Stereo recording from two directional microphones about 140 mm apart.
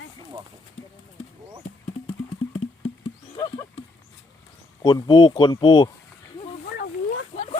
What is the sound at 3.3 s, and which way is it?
Wild animals, 40° left (ahead or behind).